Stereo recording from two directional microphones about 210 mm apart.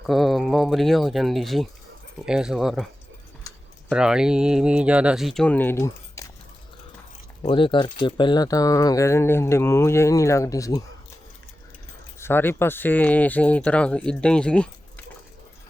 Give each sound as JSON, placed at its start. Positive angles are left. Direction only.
{"t": 0.0, "sound": "speech", "side_deg": 0}
{"t": 3.8, "sound": "speech", "side_deg": -5}
{"t": 7.4, "sound": "speech", "side_deg": 25}
{"t": 12.2, "sound": "speech", "side_deg": 10}